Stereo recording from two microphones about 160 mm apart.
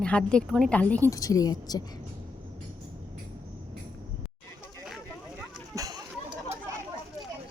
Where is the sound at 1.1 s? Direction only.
20° left (ahead or behind).